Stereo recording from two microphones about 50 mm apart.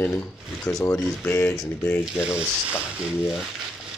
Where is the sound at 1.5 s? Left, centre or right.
Centre.